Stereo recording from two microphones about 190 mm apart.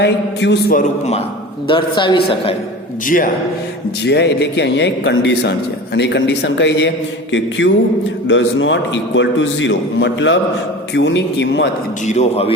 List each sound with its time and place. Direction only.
0.0 s a man's voice: 65° left (ahead or behind)
0.8 s a man's voice: 35° left (ahead or behind)
4.0 s a man's voice: 60° left (ahead or behind)
12.0 s speech: 35° left (ahead or behind)